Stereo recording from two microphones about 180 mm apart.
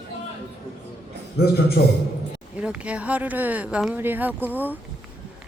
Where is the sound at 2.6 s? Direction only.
5° right (ahead or behind).